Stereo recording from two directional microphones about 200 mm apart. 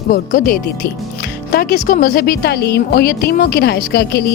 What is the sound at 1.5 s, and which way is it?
Music, 50° left (ahead or behind).